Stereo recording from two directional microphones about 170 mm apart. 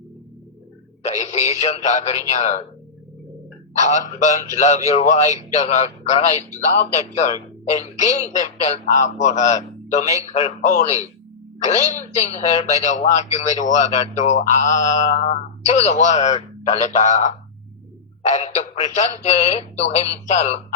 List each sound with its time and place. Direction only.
1.0 s speech: 40° left (ahead or behind)
3.8 s a man's voice: 45° left (ahead or behind)
7.9 s a man's voice: 45° left (ahead or behind)